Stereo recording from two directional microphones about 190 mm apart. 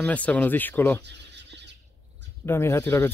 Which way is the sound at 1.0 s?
65° right (ahead or behind).